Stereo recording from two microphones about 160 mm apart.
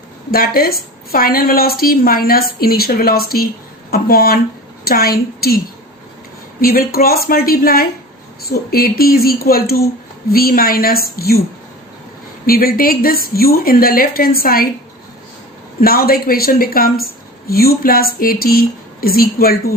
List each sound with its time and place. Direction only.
0.3 s a woman's voice: 70° left (ahead or behind)
6.6 s a woman's voice: 65° left (ahead or behind)
12.5 s a woman's voice: 70° left (ahead or behind)
15.8 s a woman's voice: 70° left (ahead or behind)